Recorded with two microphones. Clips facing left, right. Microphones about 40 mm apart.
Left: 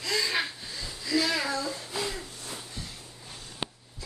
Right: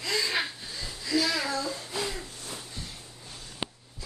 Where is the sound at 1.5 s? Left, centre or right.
Centre.